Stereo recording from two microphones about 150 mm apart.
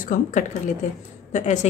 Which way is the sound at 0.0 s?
60° left (ahead or behind).